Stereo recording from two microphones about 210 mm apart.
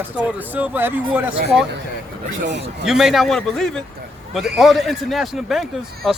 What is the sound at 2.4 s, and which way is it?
Speech, 55° right (ahead or behind).